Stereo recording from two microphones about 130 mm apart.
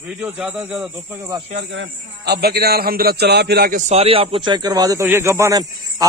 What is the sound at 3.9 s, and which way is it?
Speech, 50° right (ahead or behind).